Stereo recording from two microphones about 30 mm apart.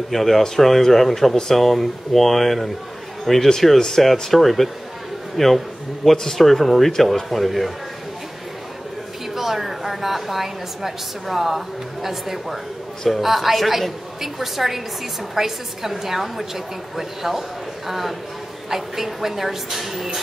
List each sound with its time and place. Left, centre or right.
0.1 s a woman's voice: centre
9.3 s a woman's voice: centre